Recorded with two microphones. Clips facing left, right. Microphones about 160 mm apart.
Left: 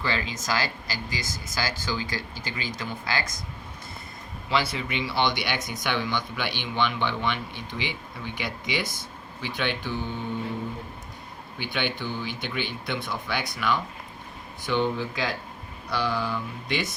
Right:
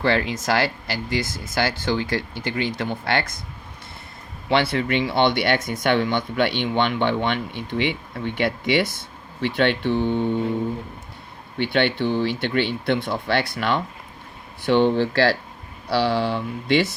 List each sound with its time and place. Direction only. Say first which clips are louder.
0.0 s speech: right 8 dB; 65° right (ahead or behind)
4.4 s speech: right 7 dB; 65° right (ahead or behind)
11.5 s speech: right 9 dB; 65° right (ahead or behind)